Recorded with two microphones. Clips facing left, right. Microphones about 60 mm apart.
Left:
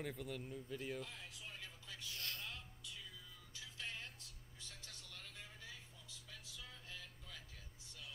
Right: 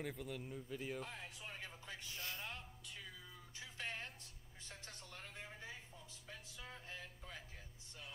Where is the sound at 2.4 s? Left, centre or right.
Right.